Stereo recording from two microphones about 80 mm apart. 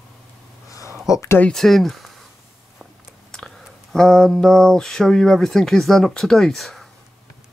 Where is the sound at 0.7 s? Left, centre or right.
Left.